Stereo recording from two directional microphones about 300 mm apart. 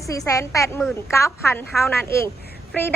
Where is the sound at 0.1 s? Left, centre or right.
Centre.